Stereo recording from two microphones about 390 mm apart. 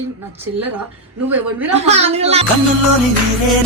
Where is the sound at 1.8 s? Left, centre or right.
Centre.